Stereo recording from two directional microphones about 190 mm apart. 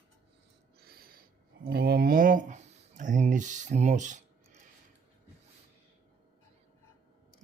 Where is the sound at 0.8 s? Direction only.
50° right (ahead or behind).